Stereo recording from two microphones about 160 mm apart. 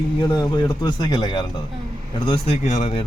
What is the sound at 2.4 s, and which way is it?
Speech, 45° left (ahead or behind).